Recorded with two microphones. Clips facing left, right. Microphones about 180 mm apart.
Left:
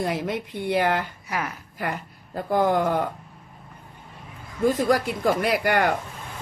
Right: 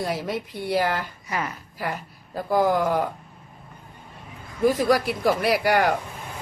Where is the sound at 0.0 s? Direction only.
20° left (ahead or behind).